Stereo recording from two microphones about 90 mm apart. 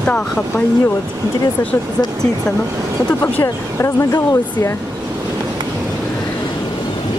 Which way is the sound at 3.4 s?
35° left (ahead or behind).